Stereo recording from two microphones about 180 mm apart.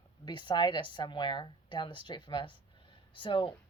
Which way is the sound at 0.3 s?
25° left (ahead or behind).